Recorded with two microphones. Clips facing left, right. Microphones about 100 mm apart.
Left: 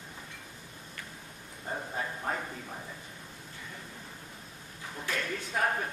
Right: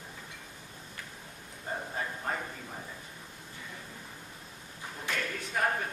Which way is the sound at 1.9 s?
5° left (ahead or behind).